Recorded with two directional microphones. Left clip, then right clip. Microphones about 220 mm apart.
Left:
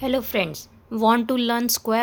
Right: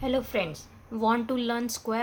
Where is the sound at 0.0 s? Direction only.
45° left (ahead or behind).